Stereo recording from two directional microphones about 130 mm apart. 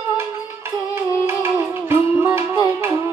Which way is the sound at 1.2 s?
20° right (ahead or behind).